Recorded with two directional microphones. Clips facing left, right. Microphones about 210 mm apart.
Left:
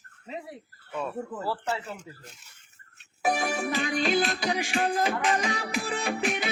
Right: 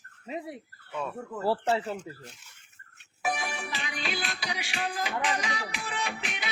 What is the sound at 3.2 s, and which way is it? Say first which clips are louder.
Music: left 6 dB; 40° left (ahead or behind).